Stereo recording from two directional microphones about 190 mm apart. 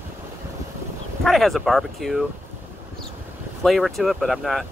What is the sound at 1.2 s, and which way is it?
Speech, centre (ahead or behind).